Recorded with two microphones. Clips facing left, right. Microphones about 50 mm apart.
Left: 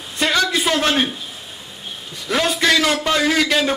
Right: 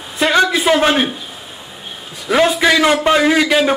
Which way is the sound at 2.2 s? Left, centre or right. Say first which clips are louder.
Right 5 dB; centre.